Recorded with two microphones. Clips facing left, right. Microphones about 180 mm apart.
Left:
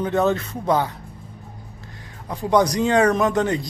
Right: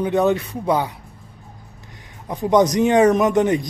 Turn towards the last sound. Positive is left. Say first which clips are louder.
# right 3 dB
turn(degrees=-20)  # may be behind; listen again after turning